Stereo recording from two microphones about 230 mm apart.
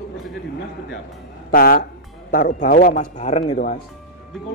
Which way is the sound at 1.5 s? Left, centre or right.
Left.